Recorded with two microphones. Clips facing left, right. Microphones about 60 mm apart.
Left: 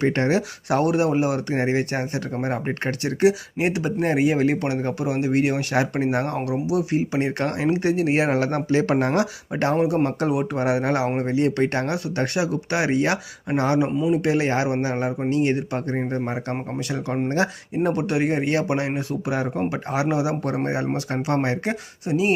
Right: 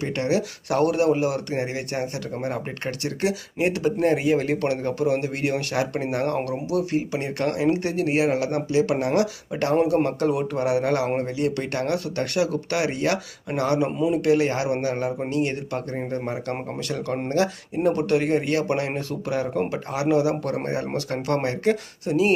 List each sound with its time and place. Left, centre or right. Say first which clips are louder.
0.0 s speech: left 3 dB; left